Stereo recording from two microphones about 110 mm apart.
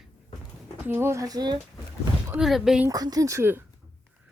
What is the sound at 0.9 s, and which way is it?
Speech, 20° right (ahead or behind).